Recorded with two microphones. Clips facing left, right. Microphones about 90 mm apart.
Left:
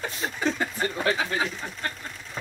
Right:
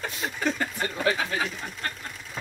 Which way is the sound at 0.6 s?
10° left (ahead or behind).